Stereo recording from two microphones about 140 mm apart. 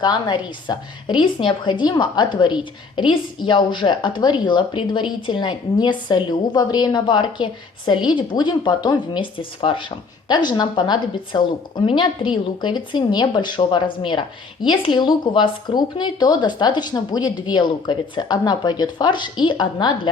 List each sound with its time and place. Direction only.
0.0 s a woman's voice: 30° left (ahead or behind)